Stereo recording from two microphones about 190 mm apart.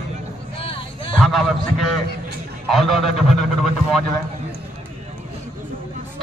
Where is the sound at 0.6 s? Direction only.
30° left (ahead or behind).